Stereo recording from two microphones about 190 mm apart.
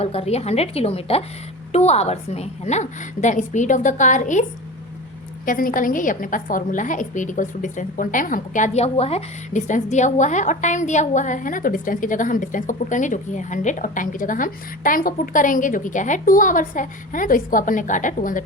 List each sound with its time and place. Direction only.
0.0 s a woman's voice: 30° left (ahead or behind)
5.5 s a woman's voice: 45° left (ahead or behind)